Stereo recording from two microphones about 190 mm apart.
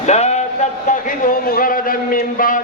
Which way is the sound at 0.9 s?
45° left (ahead or behind).